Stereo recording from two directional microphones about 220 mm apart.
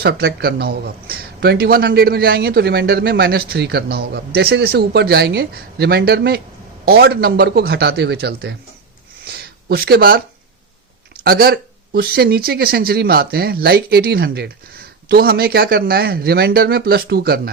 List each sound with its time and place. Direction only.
0.0 s speech: 45° right (ahead or behind)